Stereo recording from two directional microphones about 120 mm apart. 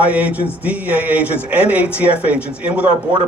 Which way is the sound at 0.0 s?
10° right (ahead or behind).